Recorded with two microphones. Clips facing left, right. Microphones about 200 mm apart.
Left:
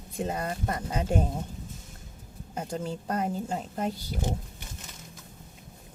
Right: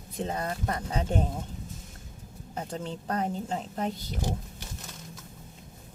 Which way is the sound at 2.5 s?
10° left (ahead or behind).